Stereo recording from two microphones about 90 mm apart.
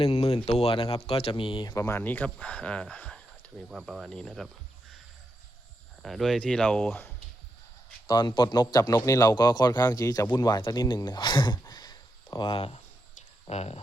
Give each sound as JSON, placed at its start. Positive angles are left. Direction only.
{"t": 0.0, "sound": "speech", "side_deg": 90}
{"t": 1.7, "sound": "a man's voice", "side_deg": 30}
{"t": 2.0, "sound": "speech", "side_deg": 20}
{"t": 3.7, "sound": "speech", "side_deg": -5}
{"t": 6.0, "sound": "speech", "side_deg": 0}
{"t": 8.0, "sound": "speech", "side_deg": 60}
{"t": 8.8, "sound": "a man's voice", "side_deg": 35}
{"t": 9.3, "sound": "speech", "side_deg": 50}
{"t": 12.5, "sound": "speech", "side_deg": 85}